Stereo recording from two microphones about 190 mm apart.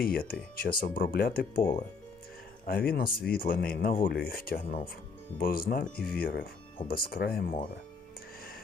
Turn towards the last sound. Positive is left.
turn(degrees=50)  # may be behind; listen again after turning